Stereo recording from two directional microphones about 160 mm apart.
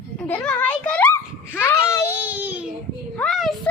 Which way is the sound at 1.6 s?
15° left (ahead or behind).